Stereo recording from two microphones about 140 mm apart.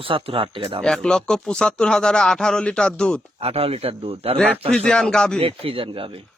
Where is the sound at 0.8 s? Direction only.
5° left (ahead or behind).